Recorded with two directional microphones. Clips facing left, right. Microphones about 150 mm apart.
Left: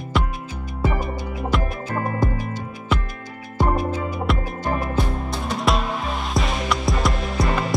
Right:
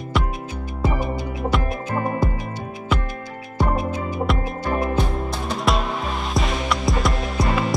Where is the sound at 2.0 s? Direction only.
15° right (ahead or behind).